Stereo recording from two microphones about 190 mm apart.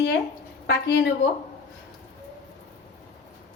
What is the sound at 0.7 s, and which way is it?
Speech, 65° left (ahead or behind).